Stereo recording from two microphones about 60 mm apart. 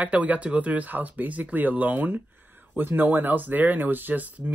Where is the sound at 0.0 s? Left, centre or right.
Right.